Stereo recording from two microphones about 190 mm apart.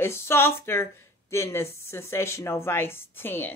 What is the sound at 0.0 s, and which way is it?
Speech, 15° left (ahead or behind).